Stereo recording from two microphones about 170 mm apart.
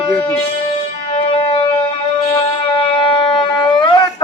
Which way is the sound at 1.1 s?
35° left (ahead or behind).